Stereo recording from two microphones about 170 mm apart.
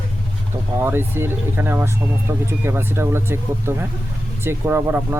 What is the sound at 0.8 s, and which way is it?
Speech, 15° right (ahead or behind).